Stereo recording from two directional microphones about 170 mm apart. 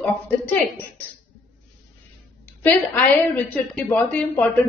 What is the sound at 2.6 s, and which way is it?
A woman's voice, 10° left (ahead or behind).